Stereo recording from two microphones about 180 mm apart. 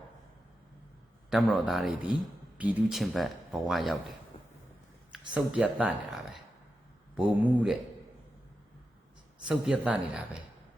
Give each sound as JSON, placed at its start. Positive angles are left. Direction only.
{"t": 1.3, "sound": "speech", "side_deg": 0}
{"t": 5.1, "sound": "speech", "side_deg": -5}
{"t": 7.2, "sound": "speech", "side_deg": -5}
{"t": 9.5, "sound": "speech", "side_deg": -5}